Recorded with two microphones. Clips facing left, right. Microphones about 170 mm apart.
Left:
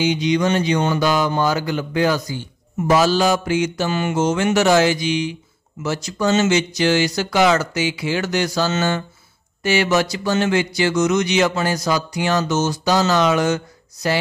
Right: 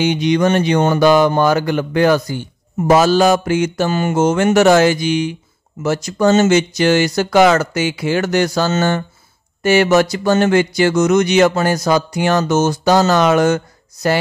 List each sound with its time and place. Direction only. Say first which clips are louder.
0.0 s speech: right 4 dB; 60° right (ahead or behind)